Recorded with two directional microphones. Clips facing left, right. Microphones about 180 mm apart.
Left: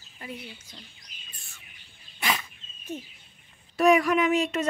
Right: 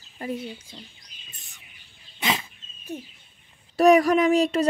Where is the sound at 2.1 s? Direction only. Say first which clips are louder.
Right 2 dB; 25° right (ahead or behind).